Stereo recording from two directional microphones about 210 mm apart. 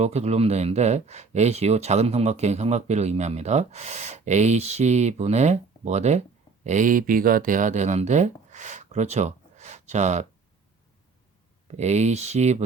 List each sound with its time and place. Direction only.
0.0 s speech: 30° right (ahead or behind)
11.7 s speech: 30° right (ahead or behind)